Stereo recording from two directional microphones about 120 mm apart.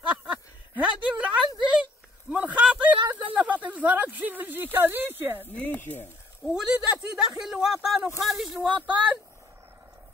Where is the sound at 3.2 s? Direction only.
15° right (ahead or behind).